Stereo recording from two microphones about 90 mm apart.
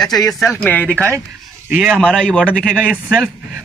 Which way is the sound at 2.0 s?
10° left (ahead or behind).